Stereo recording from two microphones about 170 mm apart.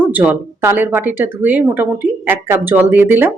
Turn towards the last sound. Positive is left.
turn(degrees=-10)  # may be behind; listen again after turning